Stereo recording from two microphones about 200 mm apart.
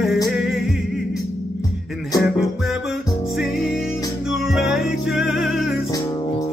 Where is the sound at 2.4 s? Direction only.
Centre (ahead or behind).